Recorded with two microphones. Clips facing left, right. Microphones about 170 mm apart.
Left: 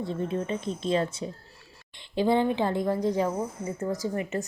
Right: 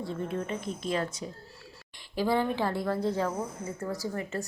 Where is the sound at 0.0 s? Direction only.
20° left (ahead or behind).